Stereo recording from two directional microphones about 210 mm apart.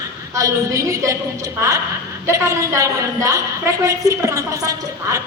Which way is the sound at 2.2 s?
15° right (ahead or behind).